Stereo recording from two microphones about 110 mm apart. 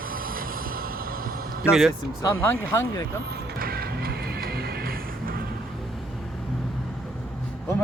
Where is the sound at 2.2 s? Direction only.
25° left (ahead or behind).